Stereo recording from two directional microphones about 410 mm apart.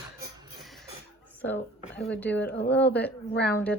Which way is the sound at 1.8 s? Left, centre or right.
Centre.